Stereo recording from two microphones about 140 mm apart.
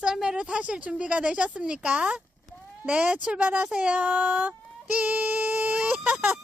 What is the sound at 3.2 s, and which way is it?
Speech, 10° right (ahead or behind).